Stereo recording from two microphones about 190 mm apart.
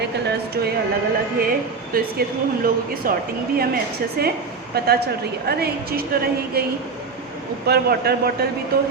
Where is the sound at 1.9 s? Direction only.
50° right (ahead or behind).